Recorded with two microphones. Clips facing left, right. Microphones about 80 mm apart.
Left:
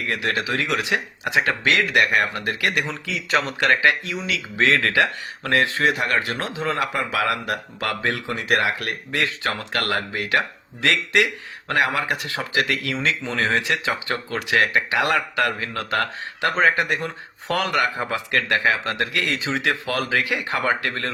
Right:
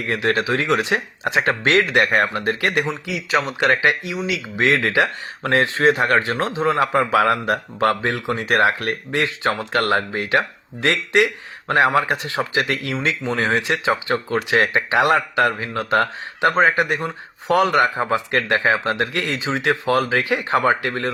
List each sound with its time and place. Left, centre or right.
0.1 s speech: right
2.8 s a man's voice: centre
3.2 s speech: centre
3.6 s speech: right